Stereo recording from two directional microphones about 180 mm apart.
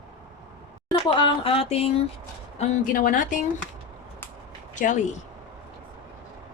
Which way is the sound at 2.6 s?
50° left (ahead or behind).